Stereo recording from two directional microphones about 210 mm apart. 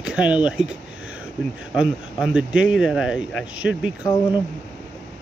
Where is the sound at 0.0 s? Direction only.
5° right (ahead or behind).